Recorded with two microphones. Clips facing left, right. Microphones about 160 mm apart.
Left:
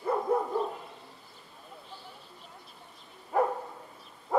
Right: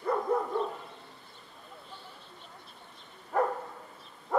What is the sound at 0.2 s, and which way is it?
Dog, 20° left (ahead or behind).